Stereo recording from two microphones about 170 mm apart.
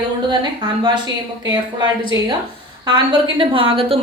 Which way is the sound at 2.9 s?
30° right (ahead or behind).